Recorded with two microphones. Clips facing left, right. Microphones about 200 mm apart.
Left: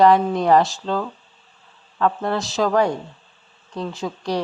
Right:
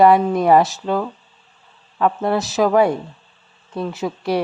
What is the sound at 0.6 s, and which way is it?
Speech, 15° right (ahead or behind).